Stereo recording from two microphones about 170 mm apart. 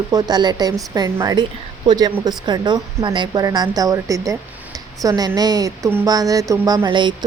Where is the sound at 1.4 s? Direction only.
25° right (ahead or behind).